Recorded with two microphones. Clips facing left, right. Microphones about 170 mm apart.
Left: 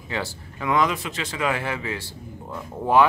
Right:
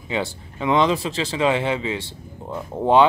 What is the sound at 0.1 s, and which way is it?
Speech, 20° right (ahead or behind).